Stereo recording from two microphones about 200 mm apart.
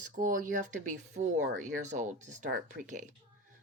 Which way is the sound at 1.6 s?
35° right (ahead or behind).